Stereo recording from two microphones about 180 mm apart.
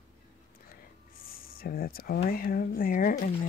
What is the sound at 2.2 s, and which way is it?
Speech, 55° left (ahead or behind).